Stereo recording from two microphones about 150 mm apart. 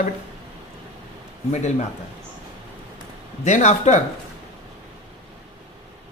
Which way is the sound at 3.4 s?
50° left (ahead or behind).